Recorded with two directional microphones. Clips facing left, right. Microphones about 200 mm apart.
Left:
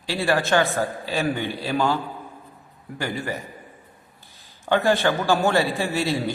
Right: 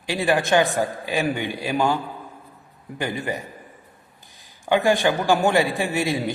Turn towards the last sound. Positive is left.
turn(degrees=-15)  # may be behind; listen again after turning